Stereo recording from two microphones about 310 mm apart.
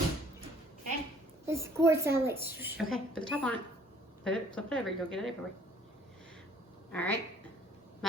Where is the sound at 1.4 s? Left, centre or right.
Centre.